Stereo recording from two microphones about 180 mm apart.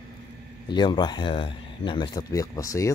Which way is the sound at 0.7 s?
25° left (ahead or behind).